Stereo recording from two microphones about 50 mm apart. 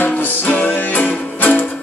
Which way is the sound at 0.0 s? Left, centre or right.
Left.